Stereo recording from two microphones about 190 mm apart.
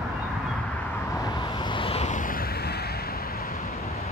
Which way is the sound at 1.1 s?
20° left (ahead or behind).